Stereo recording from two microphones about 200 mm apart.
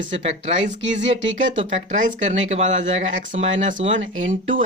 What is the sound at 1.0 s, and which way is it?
Speech, 65° right (ahead or behind).